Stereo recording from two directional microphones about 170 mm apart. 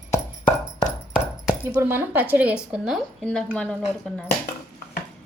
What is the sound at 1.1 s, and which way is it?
Speech, 10° right (ahead or behind).